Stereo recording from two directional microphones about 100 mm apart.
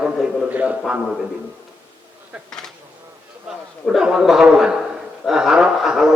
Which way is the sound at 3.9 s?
5° right (ahead or behind).